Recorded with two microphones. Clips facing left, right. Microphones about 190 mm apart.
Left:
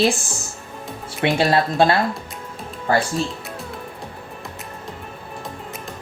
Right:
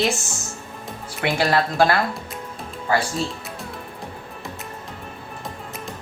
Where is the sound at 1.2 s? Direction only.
25° left (ahead or behind).